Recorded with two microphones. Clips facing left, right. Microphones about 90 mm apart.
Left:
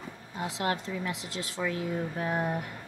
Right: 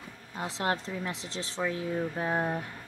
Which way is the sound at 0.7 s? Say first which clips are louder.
Right 1 dB; 35° right (ahead or behind).